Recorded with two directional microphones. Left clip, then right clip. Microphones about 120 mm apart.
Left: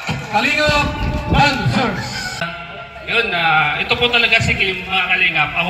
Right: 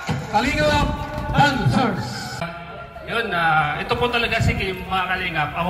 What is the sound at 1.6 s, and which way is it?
Speech, 40° left (ahead or behind).